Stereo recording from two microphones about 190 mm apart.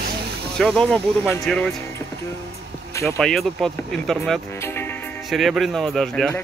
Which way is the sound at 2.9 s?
15° left (ahead or behind).